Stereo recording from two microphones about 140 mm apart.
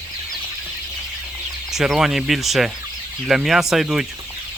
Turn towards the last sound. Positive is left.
turn(degrees=-5)  # may be behind; listen again after turning